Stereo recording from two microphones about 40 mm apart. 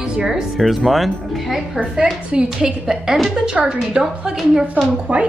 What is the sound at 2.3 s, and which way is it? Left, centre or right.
Speech, centre.